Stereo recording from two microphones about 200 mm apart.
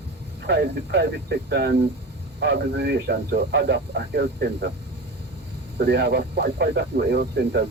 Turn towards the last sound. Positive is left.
turn(degrees=-55)  # may be behind; listen again after turning